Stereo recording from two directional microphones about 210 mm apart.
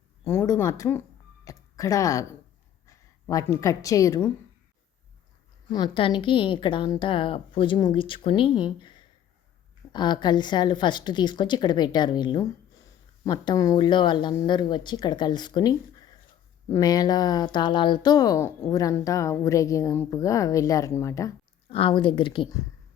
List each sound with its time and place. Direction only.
0.3 s a woman's voice: 10° left (ahead or behind)
5.7 s a woman's voice: 20° left (ahead or behind)
21.7 s a woman's voice: 25° left (ahead or behind)